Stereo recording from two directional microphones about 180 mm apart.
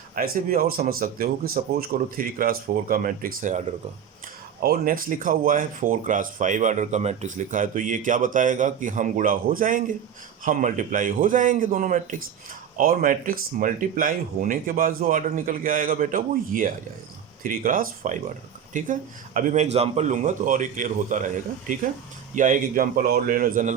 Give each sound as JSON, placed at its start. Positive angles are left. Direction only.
{"t": 0.2, "sound": "speech", "side_deg": -50}
{"t": 4.6, "sound": "speech", "side_deg": -55}